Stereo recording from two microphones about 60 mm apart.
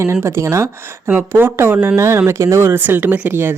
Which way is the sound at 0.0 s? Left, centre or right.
Right.